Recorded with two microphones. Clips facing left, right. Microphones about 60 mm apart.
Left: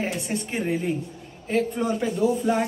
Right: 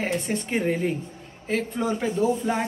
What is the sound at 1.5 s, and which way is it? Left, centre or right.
A woman's voice, centre.